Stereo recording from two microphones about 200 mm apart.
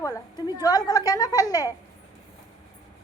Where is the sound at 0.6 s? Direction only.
20° left (ahead or behind).